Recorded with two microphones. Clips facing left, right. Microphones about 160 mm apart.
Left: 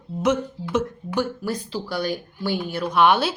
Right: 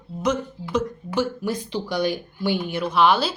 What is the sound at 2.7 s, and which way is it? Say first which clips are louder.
Speech: even; centre (ahead or behind).